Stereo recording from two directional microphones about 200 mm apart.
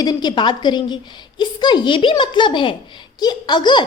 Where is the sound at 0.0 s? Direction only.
20° left (ahead or behind).